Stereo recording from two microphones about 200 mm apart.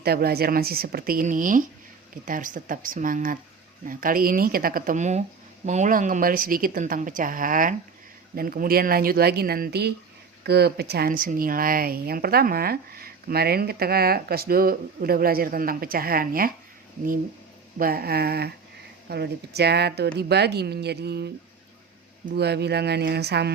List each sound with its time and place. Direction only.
0.0 s speech: 50° right (ahead or behind)
17.7 s speech: 50° right (ahead or behind)